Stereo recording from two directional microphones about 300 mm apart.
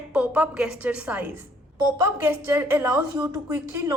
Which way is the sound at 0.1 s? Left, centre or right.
Centre.